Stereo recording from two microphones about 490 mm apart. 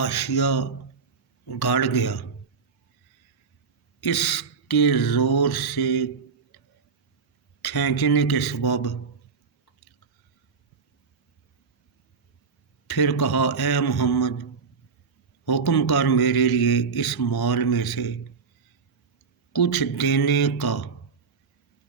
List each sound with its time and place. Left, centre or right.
0.0 s a man's voice: left
4.0 s a man's voice: left
7.6 s a man's voice: left
12.9 s a man's voice: left
15.4 s a man's voice: left
19.5 s a man's voice: left